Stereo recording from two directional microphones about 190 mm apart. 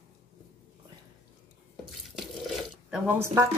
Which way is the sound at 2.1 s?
Centre (ahead or behind).